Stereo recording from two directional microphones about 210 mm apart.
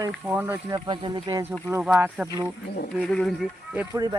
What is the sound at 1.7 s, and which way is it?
Speech, 10° right (ahead or behind).